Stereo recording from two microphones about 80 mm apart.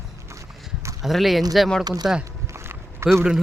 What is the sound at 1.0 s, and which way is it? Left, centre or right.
Speech, centre.